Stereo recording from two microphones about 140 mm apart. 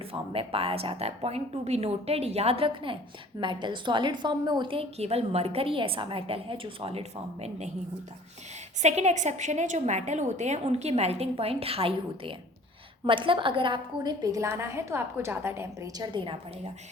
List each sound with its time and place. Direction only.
0.0 s a woman's voice: 40° right (ahead or behind)
8.8 s a woman's voice: 55° right (ahead or behind); by 16.0 s 20° right (ahead or behind)
16.1 s a woman's voice: 35° right (ahead or behind)